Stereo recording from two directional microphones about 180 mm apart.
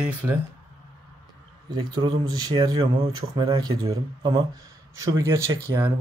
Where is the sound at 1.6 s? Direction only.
25° right (ahead or behind).